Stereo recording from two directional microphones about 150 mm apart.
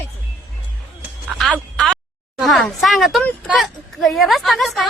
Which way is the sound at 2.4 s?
Centre (ahead or behind).